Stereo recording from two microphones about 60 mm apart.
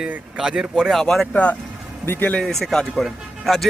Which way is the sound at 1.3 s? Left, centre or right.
Left.